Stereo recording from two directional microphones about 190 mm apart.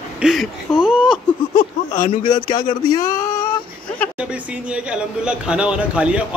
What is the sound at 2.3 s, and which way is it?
Speech, 25° left (ahead or behind).